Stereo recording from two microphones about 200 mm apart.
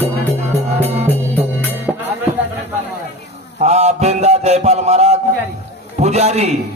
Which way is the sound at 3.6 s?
35° right (ahead or behind).